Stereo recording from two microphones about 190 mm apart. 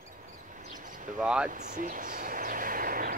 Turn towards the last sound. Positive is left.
turn(degrees=-50)  # may be behind; listen again after turning